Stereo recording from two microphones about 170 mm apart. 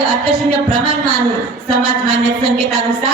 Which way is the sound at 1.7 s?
30° right (ahead or behind).